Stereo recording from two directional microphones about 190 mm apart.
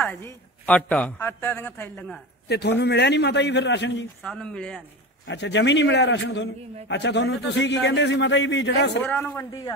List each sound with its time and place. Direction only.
0.0 s a woman's voice: 5° left (ahead or behind)
2.4 s a man's voice: 60° left (ahead or behind)
4.2 s speech: 5° left (ahead or behind)
5.2 s a man's voice: 70° left (ahead or behind)
9.0 s a woman's voice: 10° left (ahead or behind)